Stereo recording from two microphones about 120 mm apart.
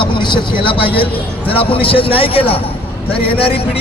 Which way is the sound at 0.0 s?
40° left (ahead or behind).